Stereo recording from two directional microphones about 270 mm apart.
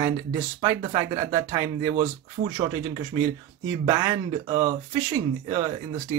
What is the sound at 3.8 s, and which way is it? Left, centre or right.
A man's voice, centre.